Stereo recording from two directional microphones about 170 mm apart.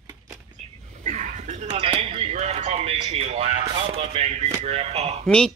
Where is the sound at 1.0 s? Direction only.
45° right (ahead or behind).